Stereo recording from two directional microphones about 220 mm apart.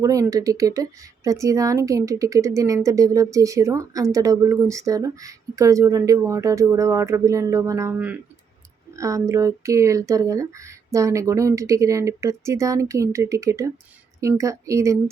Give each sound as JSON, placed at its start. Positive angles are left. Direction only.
{"t": 0.0, "sound": "speech", "side_deg": -15}